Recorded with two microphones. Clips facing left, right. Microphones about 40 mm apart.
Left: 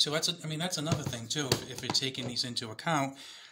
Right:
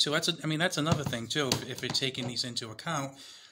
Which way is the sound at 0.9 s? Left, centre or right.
Right.